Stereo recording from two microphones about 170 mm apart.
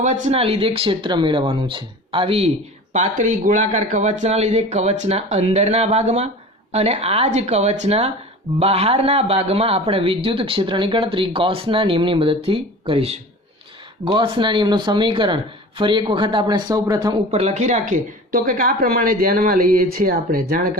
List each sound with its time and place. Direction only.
0.0 s speech: 45° right (ahead or behind)
2.9 s a man's voice: 45° right (ahead or behind); by 17.2 s 20° right (ahead or behind)
17.3 s a woman's voice: 40° right (ahead or behind); by 20.7 s 60° right (ahead or behind)